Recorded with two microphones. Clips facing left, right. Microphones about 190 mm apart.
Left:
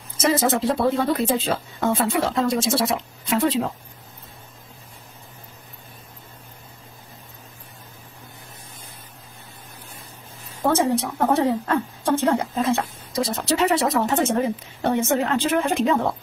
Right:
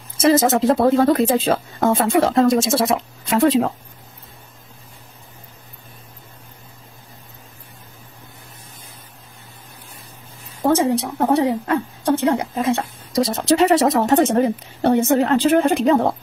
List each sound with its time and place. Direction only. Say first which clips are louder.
0.5 s speech: right 5 dB; 45° right (ahead or behind)
10.6 s a woman's voice: right 3 dB; 15° right (ahead or behind)
13.1 s a woman's voice: right 6 dB; 40° right (ahead or behind)